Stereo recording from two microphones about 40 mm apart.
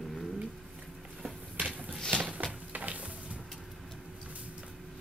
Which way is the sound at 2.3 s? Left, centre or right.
Right.